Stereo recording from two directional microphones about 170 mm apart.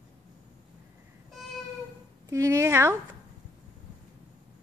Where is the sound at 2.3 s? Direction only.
15° right (ahead or behind).